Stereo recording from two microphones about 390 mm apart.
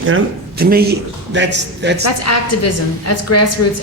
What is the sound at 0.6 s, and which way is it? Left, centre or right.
A man's voice, right.